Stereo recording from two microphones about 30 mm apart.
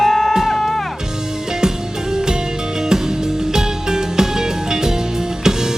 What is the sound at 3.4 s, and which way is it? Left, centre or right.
Music, centre.